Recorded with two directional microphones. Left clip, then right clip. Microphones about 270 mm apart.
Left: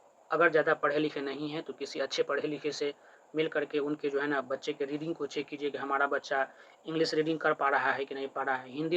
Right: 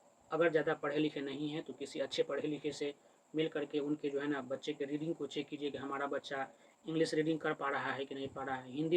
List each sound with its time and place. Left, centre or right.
0.3 s speech: centre